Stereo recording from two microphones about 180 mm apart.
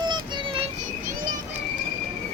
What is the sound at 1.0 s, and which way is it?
Children playing, 50° right (ahead or behind).